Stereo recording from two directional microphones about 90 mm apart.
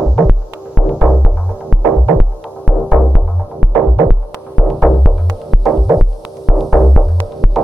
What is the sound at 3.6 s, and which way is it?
Throbbing, 5° left (ahead or behind).